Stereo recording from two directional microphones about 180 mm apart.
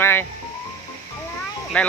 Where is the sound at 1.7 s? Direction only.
5° left (ahead or behind).